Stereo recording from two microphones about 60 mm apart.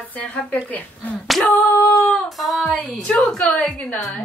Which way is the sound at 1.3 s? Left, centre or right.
Centre.